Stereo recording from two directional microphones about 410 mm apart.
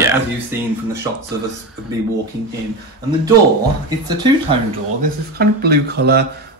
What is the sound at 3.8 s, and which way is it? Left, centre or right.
Speech, centre.